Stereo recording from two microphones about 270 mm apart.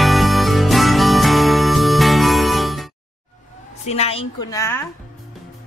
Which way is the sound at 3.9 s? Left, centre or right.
Left.